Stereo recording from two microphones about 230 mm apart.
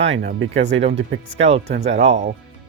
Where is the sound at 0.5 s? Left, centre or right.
Right.